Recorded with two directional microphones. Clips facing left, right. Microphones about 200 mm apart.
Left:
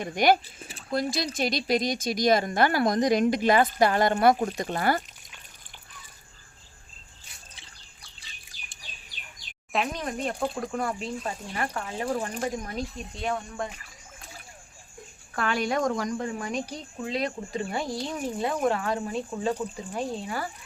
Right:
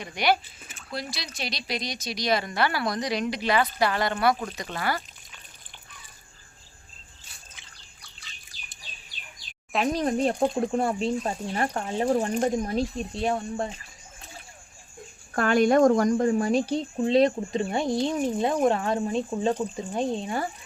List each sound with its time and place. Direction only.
0.0 s speech: 45° left (ahead or behind)
9.8 s speech: 35° right (ahead or behind)
15.3 s speech: 45° right (ahead or behind); by 20.5 s 25° right (ahead or behind)